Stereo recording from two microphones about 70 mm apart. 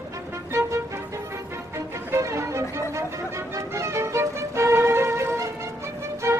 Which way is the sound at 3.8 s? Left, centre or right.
Right.